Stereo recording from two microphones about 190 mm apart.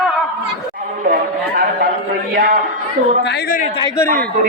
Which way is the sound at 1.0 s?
50° right (ahead or behind).